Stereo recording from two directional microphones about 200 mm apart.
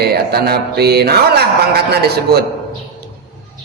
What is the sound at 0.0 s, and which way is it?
Mantra, 55° right (ahead or behind).